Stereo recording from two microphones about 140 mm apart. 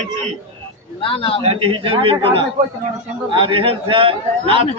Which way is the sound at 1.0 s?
40° left (ahead or behind).